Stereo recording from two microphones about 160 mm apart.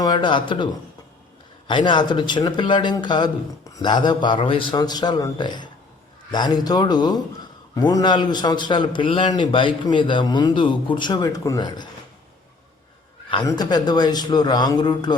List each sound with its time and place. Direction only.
0.0 s a man's voice: 25° left (ahead or behind)
13.3 s a man's voice: 25° left (ahead or behind)